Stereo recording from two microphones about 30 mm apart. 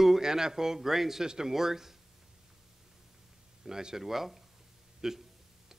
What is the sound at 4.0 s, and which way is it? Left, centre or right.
A man's voice, centre.